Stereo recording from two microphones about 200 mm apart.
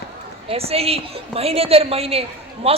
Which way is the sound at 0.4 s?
30° right (ahead or behind).